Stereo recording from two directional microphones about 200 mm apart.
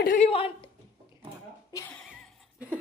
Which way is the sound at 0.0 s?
45° left (ahead or behind).